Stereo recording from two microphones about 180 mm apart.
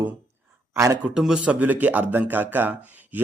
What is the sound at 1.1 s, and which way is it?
A man's voice, 5° right (ahead or behind).